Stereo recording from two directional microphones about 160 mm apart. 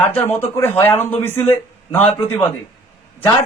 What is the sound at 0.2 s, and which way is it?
Speech, 15° left (ahead or behind).